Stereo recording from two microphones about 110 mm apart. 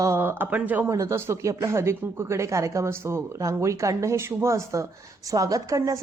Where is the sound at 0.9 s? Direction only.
25° right (ahead or behind).